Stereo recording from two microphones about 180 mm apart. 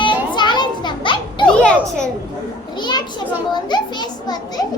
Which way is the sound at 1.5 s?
5° left (ahead or behind).